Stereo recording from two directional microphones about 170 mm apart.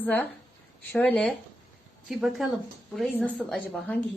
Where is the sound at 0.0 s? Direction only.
10° left (ahead or behind).